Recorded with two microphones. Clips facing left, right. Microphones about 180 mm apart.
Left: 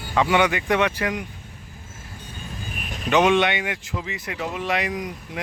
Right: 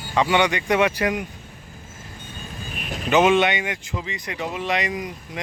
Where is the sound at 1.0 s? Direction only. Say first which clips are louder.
Right 3 dB; 20° right (ahead or behind).